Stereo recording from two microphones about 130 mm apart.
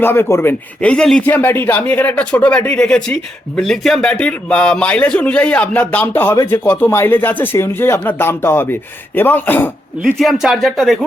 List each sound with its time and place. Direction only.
0.0 s speech: 15° left (ahead or behind)
0.8 s speech: 5° left (ahead or behind)
10.2 s speech: centre (ahead or behind)